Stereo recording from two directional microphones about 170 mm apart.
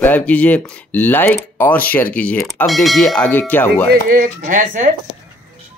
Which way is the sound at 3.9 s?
55° right (ahead or behind).